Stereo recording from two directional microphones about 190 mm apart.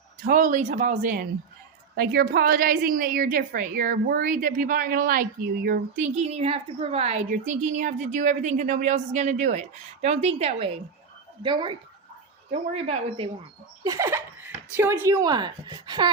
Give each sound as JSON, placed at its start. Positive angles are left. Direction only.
{"t": 0.2, "sound": "a woman's voice", "side_deg": -45}
{"t": 6.0, "sound": "a woman's voice", "side_deg": -35}
{"t": 13.8, "sound": "speech", "side_deg": -15}